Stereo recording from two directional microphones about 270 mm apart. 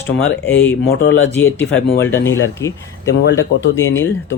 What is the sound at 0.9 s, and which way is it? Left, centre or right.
Speech, left.